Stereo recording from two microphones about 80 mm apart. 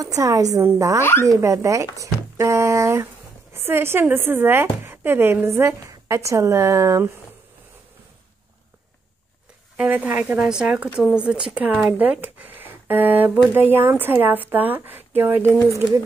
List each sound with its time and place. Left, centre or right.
0.0 s speech: right
2.0 s a sound: right
3.5 s speech: right
9.8 s speech: right
10.4 s a woman's voice: centre; by 15.5 s right